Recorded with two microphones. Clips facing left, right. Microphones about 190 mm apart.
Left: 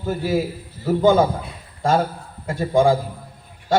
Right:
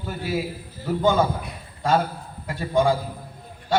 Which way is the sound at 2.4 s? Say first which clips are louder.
Left 4 dB; 40° left (ahead or behind).